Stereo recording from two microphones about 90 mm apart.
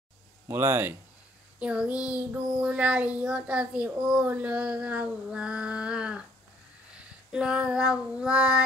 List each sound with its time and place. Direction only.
0.5 s speech: 25° right (ahead or behind)
1.6 s a child's voice: 10° right (ahead or behind)
7.3 s a child's voice: 10° right (ahead or behind)